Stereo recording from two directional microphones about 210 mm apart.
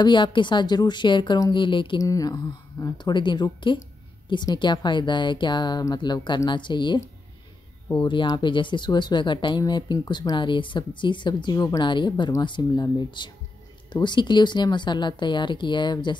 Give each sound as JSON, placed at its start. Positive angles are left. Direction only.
{"t": 0.0, "sound": "speech", "side_deg": 20}
{"t": 8.0, "sound": "speech", "side_deg": 20}